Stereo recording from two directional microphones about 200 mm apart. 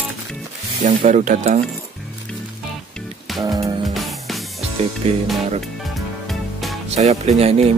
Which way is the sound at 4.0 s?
Centre (ahead or behind).